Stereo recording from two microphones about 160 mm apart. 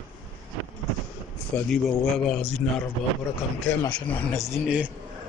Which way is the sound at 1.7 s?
5° left (ahead or behind).